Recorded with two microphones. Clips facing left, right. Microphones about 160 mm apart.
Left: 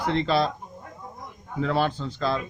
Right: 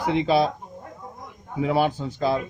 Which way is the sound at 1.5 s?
10° right (ahead or behind).